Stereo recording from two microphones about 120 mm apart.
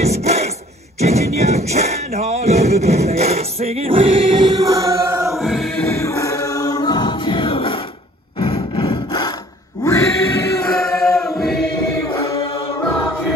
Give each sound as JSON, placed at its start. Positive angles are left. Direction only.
{"t": 0.0, "sound": "rub", "side_deg": -65}
{"t": 0.9, "sound": "music", "side_deg": -65}
{"t": 5.4, "sound": "music", "side_deg": 0}
{"t": 5.9, "sound": "music", "side_deg": 25}
{"t": 9.8, "sound": "music", "side_deg": 25}
{"t": 10.8, "sound": "choir", "side_deg": 5}